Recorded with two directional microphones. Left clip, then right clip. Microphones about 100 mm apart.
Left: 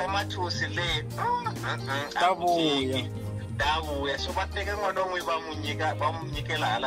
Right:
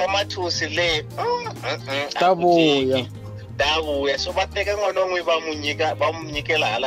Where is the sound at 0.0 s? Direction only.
35° right (ahead or behind).